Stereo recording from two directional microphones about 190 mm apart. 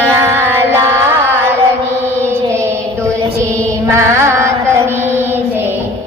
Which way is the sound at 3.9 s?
15° right (ahead or behind).